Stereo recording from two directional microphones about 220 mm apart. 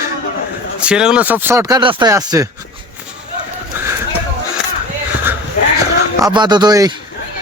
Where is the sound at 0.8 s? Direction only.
5° right (ahead or behind).